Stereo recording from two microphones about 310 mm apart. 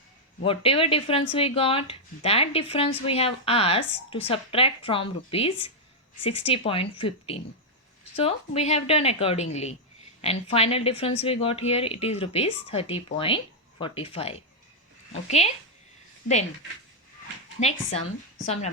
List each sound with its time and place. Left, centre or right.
0.4 s a woman's voice: centre
17.6 s a woman's voice: centre